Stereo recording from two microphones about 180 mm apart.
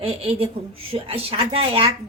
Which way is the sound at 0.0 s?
30° right (ahead or behind).